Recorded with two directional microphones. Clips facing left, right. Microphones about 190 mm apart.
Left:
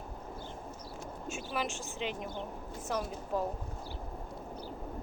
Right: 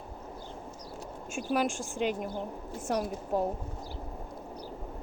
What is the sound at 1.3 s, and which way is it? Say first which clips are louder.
Speech: right 7 dB; 50° right (ahead or behind).